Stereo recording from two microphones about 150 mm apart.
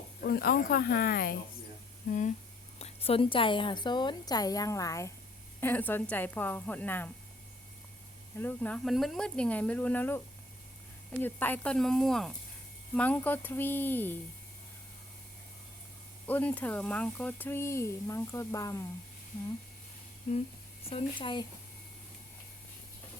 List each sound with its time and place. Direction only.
0.2 s speech: 85° left
2.0 s speech: 55° left (ahead or behind)
2.7 s a woman's voice: 45° left (ahead or behind); by 7.1 s 10° left (ahead or behind)
8.4 s speech: 10° left (ahead or behind)
11.2 s speech: 10° left (ahead or behind)
16.2 s speech: 10° left (ahead or behind)
20.9 s a woman's voice: 35° left (ahead or behind)